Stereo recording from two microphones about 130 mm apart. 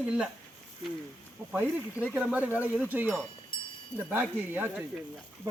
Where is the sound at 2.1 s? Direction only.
10° right (ahead or behind).